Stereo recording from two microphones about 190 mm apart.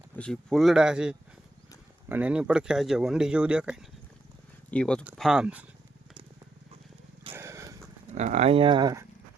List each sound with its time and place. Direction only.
0.2 s speech: centre (ahead or behind)
7.3 s a sound: 15° right (ahead or behind)
8.1 s speech: 35° right (ahead or behind); by 9.0 s 20° right (ahead or behind)